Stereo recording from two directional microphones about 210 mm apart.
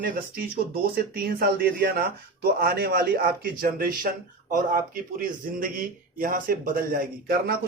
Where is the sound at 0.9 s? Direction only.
45° right (ahead or behind).